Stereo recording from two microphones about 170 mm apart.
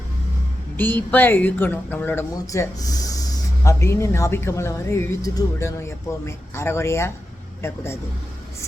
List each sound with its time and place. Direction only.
0.8 s speech: 10° left (ahead or behind)